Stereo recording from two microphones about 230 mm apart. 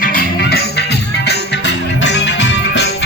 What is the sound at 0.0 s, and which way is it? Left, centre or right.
Music, left.